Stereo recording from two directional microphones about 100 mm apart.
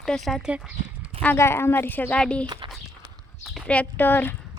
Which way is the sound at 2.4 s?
45° right (ahead or behind).